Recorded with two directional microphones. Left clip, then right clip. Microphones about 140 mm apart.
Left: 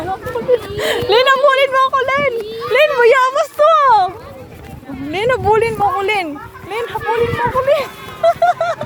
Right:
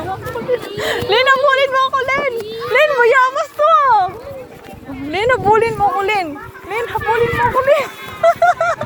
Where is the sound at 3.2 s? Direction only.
70° left (ahead or behind).